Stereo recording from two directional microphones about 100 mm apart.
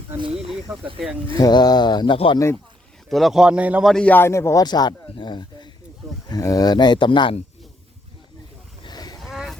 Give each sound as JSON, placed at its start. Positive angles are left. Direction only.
{"t": 0.2, "sound": "speech", "side_deg": -75}
{"t": 1.4, "sound": "speech", "side_deg": 40}
{"t": 2.1, "sound": "speech", "side_deg": 60}
{"t": 3.1, "sound": "speech", "side_deg": 0}
{"t": 3.8, "sound": "a man's voice", "side_deg": 5}
{"t": 4.1, "sound": "speech", "side_deg": 25}
{"t": 4.6, "sound": "speech", "side_deg": 45}
{"t": 6.2, "sound": "speech", "side_deg": 40}
{"t": 8.8, "sound": "cattle", "side_deg": 45}
{"t": 9.2, "sound": "vehicle", "side_deg": 0}